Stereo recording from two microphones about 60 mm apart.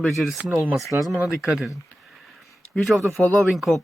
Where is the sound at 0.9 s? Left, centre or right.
Right.